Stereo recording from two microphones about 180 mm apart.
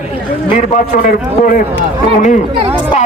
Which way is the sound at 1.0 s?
50° left (ahead or behind).